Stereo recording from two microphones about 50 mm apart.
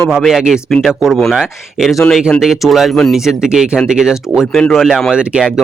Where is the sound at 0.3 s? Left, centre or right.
Centre.